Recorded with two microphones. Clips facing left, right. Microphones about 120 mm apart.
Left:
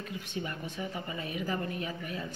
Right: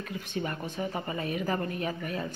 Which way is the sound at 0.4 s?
50° right (ahead or behind).